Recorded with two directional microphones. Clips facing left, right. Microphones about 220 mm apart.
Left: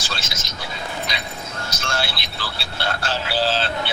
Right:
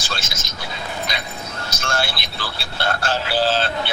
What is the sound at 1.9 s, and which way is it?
Speech, 50° right (ahead or behind).